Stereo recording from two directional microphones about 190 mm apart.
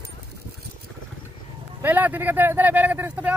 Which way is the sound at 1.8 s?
10° right (ahead or behind).